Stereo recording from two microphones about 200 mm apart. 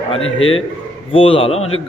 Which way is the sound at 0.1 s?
25° left (ahead or behind).